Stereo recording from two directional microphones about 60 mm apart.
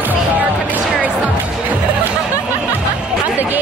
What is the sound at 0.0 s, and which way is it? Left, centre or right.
Music, right.